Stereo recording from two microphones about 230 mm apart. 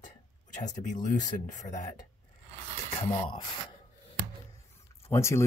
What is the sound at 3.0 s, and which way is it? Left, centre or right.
Speech, left.